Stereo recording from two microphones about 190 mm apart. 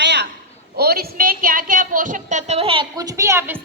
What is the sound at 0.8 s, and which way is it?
A woman's voice, 55° right (ahead or behind).